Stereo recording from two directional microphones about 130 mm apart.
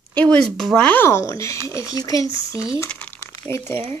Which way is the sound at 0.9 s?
20° left (ahead or behind).